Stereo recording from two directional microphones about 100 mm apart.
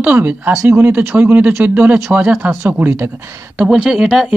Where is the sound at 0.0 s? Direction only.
15° right (ahead or behind).